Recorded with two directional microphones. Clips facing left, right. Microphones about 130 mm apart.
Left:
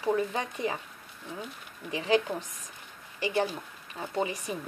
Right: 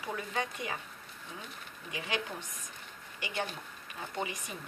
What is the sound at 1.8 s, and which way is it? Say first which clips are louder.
Speech: left 10 dB; 30° left (ahead or behind).